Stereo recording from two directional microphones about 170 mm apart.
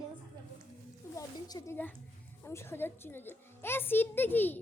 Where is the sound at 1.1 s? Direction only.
20° left (ahead or behind).